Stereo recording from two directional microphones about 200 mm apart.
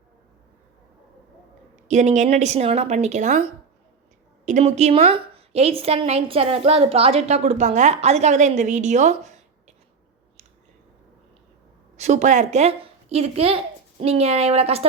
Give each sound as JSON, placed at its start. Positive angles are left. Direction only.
{"t": 1.9, "sound": "a woman's voice", "side_deg": -35}
{"t": 4.4, "sound": "a woman's voice", "side_deg": -35}
{"t": 11.9, "sound": "a woman's voice", "side_deg": -35}